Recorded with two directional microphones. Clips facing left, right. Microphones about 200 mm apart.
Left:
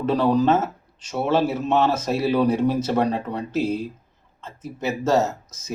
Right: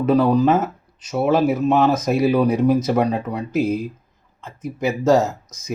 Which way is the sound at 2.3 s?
10° right (ahead or behind).